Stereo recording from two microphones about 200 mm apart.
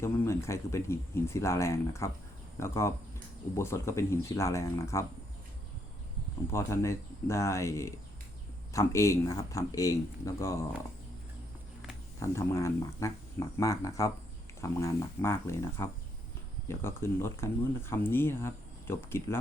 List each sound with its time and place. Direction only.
0.0 s speech: 15° left (ahead or behind)
6.5 s speech: 15° left (ahead or behind)
12.2 s speech: 15° left (ahead or behind)